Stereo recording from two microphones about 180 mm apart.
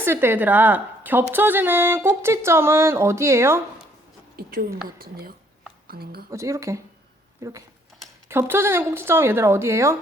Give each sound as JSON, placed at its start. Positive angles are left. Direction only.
{"t": 0.0, "sound": "a woman's voice", "side_deg": -15}
{"t": 4.4, "sound": "a sound", "side_deg": -60}
{"t": 5.9, "sound": "a woman's voice", "side_deg": -60}
{"t": 6.3, "sound": "a woman's voice", "side_deg": -15}
{"t": 8.3, "sound": "a woman's voice", "side_deg": -15}